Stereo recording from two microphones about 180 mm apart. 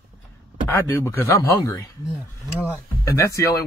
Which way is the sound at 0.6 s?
15° left (ahead or behind).